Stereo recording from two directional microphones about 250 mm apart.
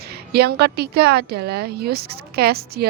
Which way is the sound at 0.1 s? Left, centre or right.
Right.